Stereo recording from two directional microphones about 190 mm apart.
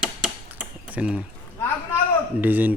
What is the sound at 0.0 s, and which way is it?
Typewriter, 5° right (ahead or behind).